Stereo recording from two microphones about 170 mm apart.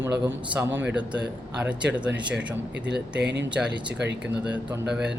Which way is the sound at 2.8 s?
90° right.